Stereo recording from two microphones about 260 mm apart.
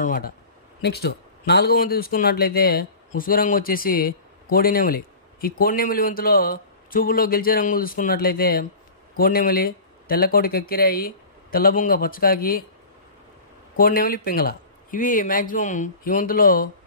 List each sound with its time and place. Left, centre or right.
0.0 s speech: left
13.7 s speech: left